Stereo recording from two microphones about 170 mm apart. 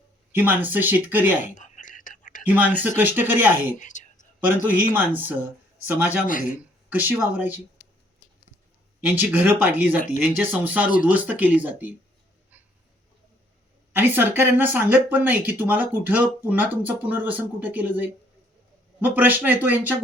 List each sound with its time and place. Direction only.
0.3 s speech: 10° right (ahead or behind)
1.5 s whispering: 45° left (ahead or behind)
2.4 s speech: 10° right (ahead or behind)
3.8 s a sound: 45° left (ahead or behind)
4.9 s speech: 10° right (ahead or behind)
6.1 s speech: 50° left (ahead or behind)
6.6 s speech: 10° right (ahead or behind)
9.0 s speech: 10° right (ahead or behind)
13.9 s speech: 10° right (ahead or behind)